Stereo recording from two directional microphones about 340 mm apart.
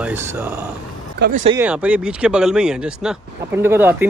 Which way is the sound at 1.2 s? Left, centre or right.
Centre.